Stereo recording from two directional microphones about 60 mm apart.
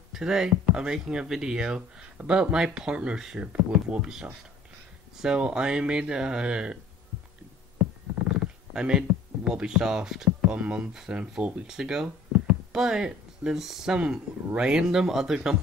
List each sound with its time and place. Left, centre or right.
0.1 s speech: centre
8.2 s a sound: centre
10.5 s speech: centre
11.1 s speech: right
11.6 s speech: centre